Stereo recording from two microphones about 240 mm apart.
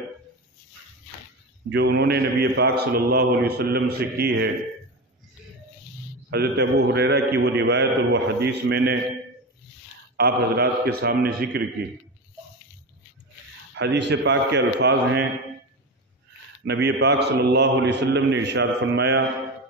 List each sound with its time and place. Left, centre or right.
1.7 s a man's voice: right
6.3 s a man's voice: right
10.1 s speech: right
13.7 s a man's voice: right
16.6 s a man's voice: right